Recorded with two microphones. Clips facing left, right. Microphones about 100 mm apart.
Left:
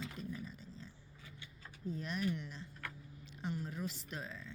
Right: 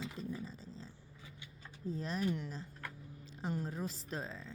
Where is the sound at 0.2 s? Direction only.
30° right (ahead or behind).